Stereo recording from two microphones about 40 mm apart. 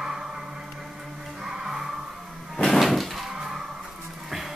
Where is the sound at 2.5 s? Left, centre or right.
Centre.